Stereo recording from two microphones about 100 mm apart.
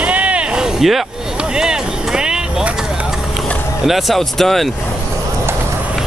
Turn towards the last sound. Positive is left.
turn(degrees=0)  # may be behind; listen again after turning